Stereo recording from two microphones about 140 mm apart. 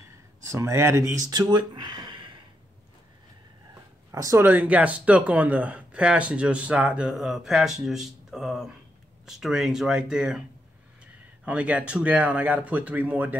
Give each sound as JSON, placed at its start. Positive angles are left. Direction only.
{"t": 0.5, "sound": "speech", "side_deg": -20}
{"t": 4.1, "sound": "speech", "side_deg": -25}
{"t": 11.4, "sound": "speech", "side_deg": -10}